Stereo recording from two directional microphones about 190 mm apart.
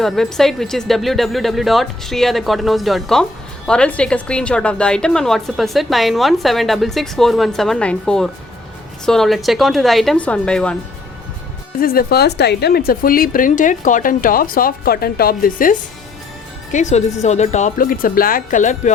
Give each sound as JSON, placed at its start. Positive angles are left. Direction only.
{"t": 0.0, "sound": "a woman's voice", "side_deg": 0}
{"t": 11.8, "sound": "speech", "side_deg": 50}